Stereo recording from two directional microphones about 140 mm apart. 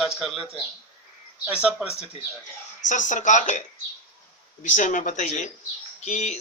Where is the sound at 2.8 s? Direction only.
65° left (ahead or behind).